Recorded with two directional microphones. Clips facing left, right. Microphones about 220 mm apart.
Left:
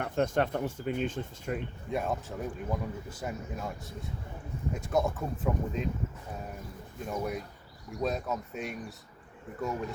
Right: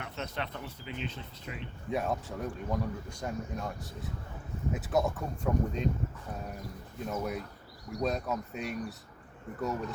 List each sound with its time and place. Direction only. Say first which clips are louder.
0.0 s speech: left 10 dB; 50° left (ahead or behind)
1.9 s speech: even; centre (ahead or behind)
7.0 s speech: left 1 dB; centre (ahead or behind)